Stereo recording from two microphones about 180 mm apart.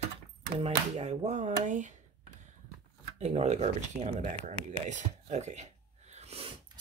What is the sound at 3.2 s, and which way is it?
Speech, 35° right (ahead or behind).